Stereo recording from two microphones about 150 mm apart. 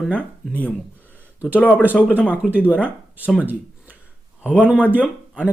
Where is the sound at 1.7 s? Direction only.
10° right (ahead or behind).